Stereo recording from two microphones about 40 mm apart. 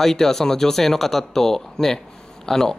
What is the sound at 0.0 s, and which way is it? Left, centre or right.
Speech, centre.